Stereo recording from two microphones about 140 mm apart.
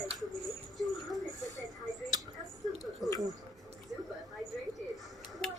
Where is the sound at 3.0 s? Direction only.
Centre (ahead or behind).